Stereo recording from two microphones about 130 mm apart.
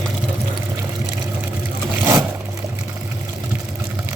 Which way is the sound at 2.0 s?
25° right (ahead or behind).